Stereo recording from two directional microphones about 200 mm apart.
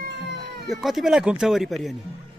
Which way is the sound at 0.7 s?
Centre (ahead or behind).